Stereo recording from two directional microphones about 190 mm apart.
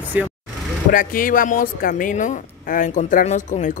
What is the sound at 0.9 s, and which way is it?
A woman's voice, 45° left (ahead or behind).